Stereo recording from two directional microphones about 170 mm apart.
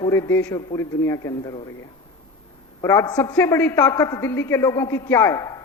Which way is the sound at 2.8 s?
15° left (ahead or behind).